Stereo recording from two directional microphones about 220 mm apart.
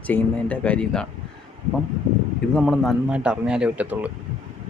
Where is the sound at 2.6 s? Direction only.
Centre (ahead or behind).